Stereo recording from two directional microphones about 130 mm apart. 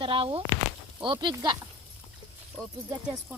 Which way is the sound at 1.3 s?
35° right (ahead or behind).